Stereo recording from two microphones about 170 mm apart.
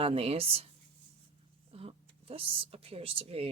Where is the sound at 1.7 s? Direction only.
35° right (ahead or behind).